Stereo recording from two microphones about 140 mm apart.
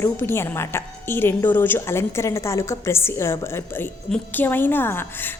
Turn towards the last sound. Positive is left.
turn(degrees=15)  # may be behind; listen again after turning